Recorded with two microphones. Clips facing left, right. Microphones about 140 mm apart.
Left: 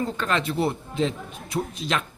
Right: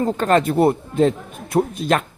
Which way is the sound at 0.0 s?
45° right (ahead or behind).